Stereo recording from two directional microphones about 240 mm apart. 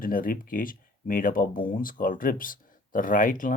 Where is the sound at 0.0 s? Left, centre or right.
Left.